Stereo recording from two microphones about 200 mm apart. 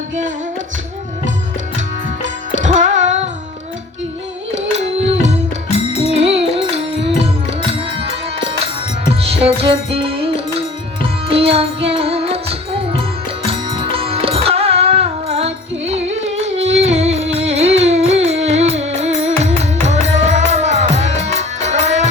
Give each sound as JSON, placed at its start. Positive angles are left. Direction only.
{"t": 2.6, "sound": "music", "side_deg": -40}
{"t": 4.9, "sound": "music", "side_deg": -35}
{"t": 5.7, "sound": "music", "side_deg": 30}
{"t": 6.1, "sound": "music", "side_deg": -30}